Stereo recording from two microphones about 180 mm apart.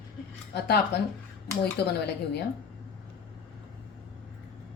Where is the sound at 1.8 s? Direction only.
65° left (ahead or behind).